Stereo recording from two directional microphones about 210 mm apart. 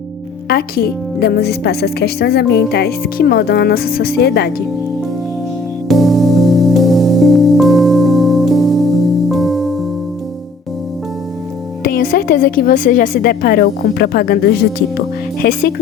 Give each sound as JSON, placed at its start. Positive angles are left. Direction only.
{"t": 0.4, "sound": "speech", "side_deg": 50}
{"t": 5.9, "sound": "music", "side_deg": 0}
{"t": 11.8, "sound": "speech", "side_deg": 45}